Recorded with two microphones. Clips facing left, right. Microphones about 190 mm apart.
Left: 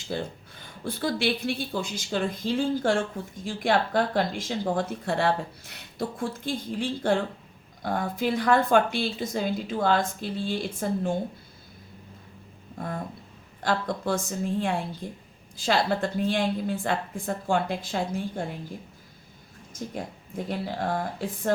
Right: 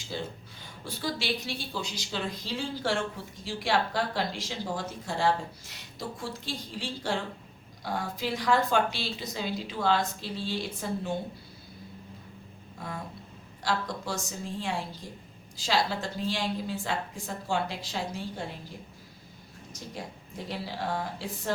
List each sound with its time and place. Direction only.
0.1 s a woman's voice: 55° left (ahead or behind)
12.8 s a sound: 50° left (ahead or behind)
13.6 s a woman's voice: 55° left (ahead or behind)
19.7 s a woman's voice: 50° left (ahead or behind)